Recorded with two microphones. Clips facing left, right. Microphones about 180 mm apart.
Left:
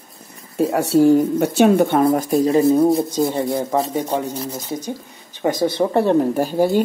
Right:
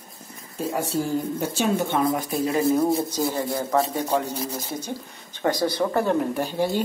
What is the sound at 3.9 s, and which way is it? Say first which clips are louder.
Speech: left 3 dB; 10° left (ahead or behind).